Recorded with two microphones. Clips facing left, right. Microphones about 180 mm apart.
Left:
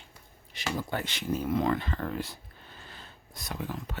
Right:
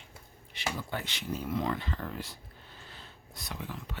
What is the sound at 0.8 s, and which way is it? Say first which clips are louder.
Speech: left 4 dB; 45° left (ahead or behind).